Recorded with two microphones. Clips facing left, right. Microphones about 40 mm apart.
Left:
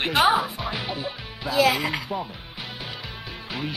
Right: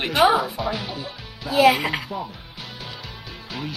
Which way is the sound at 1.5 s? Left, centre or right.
Right.